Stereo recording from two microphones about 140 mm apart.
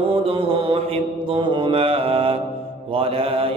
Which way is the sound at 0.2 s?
45° right (ahead or behind).